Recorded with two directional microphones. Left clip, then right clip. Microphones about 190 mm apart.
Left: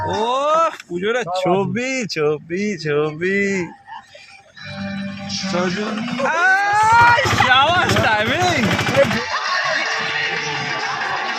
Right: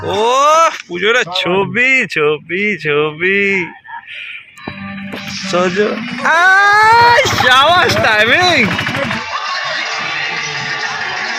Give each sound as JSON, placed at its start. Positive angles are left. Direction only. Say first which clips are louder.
{"t": 0.1, "sound": "speech", "louder": "right 9 dB", "side_deg": -15}
{"t": 6.2, "sound": "speech", "louder": "right 7 dB", "side_deg": -55}
{"t": 9.3, "sound": "a sound", "louder": "right 1 dB", "side_deg": 0}
{"t": 10.0, "sound": "music", "louder": "right 3 dB", "side_deg": -25}